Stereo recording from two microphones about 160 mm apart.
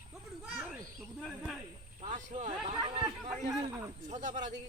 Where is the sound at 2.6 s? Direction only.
30° right (ahead or behind).